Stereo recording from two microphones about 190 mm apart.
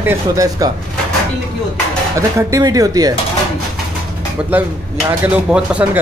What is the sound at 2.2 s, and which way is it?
Speech, 15° right (ahead or behind).